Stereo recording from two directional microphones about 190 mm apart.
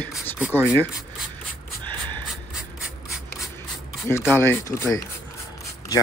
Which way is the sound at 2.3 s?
5° right (ahead or behind).